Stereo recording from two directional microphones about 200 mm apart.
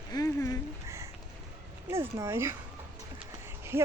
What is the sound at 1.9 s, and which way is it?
Speech, 15° right (ahead or behind).